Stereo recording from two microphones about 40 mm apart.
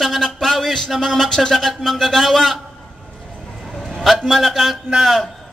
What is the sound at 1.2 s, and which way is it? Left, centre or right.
Speech, centre.